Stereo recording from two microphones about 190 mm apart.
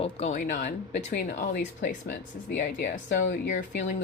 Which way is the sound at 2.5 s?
60° left (ahead or behind).